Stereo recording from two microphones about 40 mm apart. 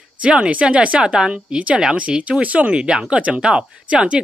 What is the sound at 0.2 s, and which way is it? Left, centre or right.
Speech, right.